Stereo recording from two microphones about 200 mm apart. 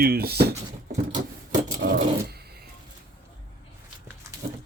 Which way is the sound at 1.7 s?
60° right (ahead or behind).